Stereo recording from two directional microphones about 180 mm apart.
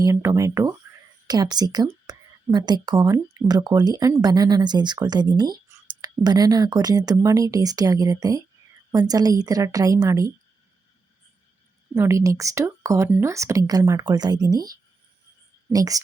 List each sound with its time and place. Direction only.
0.0 s speech: 20° right (ahead or behind)
11.9 s speech: 15° right (ahead or behind)
15.7 s speech: 20° right (ahead or behind)